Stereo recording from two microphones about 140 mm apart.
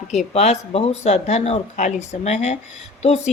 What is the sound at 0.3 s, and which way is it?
Speech, 55° left (ahead or behind).